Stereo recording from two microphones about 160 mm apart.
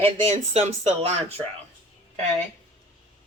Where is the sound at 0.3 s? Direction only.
40° right (ahead or behind).